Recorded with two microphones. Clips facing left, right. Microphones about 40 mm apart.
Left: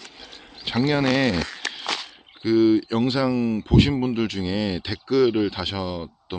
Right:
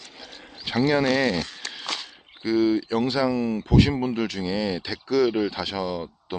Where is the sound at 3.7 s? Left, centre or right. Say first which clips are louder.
Even; centre.